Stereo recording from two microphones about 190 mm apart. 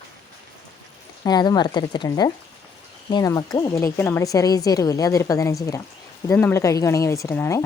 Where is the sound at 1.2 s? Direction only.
20° left (ahead or behind).